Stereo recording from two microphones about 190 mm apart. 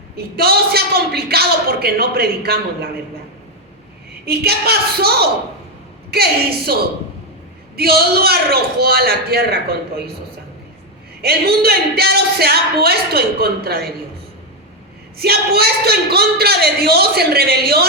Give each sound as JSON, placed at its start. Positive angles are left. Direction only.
{"t": 0.3, "sound": "speech", "side_deg": -55}
{"t": 4.3, "sound": "speech", "side_deg": -55}
{"t": 11.2, "sound": "speech", "side_deg": -55}
{"t": 15.2, "sound": "speech", "side_deg": -55}